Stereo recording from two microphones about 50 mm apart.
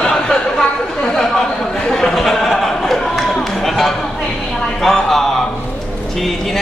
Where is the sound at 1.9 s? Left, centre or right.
Centre.